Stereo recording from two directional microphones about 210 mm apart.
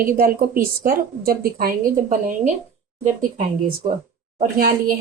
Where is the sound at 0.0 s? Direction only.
40° right (ahead or behind).